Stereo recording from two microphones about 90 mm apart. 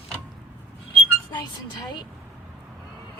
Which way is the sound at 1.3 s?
55° left (ahead or behind).